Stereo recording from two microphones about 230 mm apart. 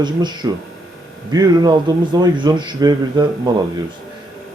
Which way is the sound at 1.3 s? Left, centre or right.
Centre.